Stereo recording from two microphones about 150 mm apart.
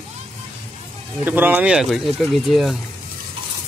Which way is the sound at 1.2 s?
10° right (ahead or behind).